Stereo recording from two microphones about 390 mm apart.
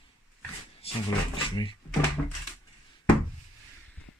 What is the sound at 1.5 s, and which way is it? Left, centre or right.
Speech, centre.